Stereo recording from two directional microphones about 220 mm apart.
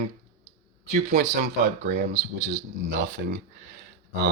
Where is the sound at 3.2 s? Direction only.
50° right (ahead or behind).